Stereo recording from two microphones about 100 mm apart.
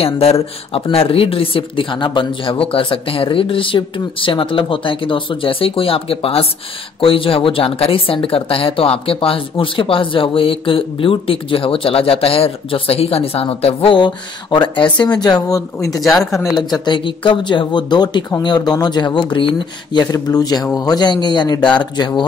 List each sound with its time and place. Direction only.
0.0 s speech: 80° left
13.9 s speech: 50° left (ahead or behind)
16.7 s speech: 50° left (ahead or behind)